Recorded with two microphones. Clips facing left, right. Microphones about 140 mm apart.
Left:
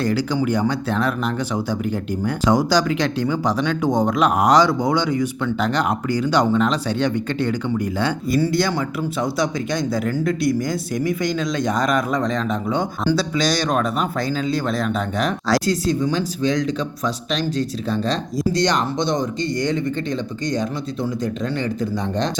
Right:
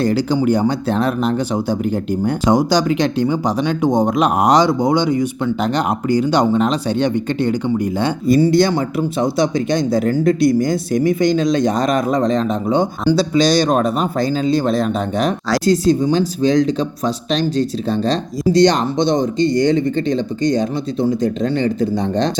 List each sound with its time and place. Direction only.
0.0 s speech: 25° right (ahead or behind)